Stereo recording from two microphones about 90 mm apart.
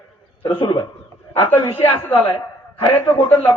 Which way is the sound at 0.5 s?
55° left (ahead or behind).